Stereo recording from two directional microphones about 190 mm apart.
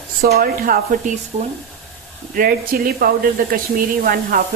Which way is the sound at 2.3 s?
50° right (ahead or behind).